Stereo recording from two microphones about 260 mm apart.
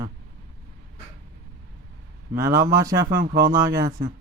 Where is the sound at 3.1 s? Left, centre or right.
Right.